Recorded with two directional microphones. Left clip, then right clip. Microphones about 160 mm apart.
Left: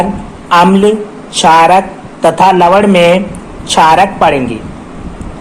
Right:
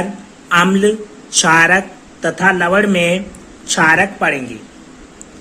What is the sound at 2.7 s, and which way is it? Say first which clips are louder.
Speech: left 7 dB; 20° right (ahead or behind).